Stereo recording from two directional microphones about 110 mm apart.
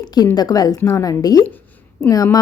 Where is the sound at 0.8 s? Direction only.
25° left (ahead or behind).